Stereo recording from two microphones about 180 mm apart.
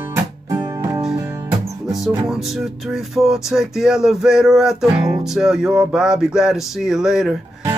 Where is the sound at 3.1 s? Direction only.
Centre (ahead or behind).